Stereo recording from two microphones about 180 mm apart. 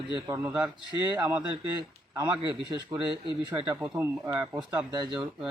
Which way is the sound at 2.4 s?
25° right (ahead or behind).